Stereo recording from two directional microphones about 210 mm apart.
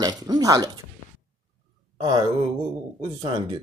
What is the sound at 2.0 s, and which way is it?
Speech, 20° right (ahead or behind).